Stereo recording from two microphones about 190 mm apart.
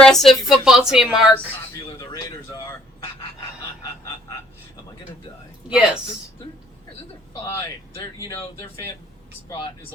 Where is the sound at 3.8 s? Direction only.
20° left (ahead or behind).